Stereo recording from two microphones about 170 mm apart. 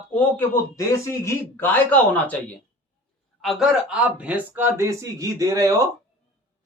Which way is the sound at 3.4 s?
Centre (ahead or behind).